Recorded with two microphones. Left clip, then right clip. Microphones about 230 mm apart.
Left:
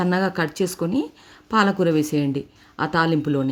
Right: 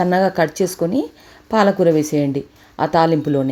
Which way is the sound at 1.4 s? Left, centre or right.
Centre.